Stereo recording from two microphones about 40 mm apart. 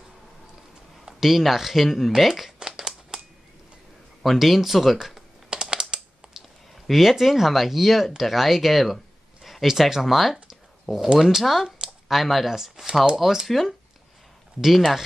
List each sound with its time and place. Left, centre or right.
1.2 s speech: centre
2.6 s crumpling: centre
4.2 s speech: centre
5.5 s typing: right
6.7 s speech: centre
11.8 s a sound: centre
12.4 s speech: centre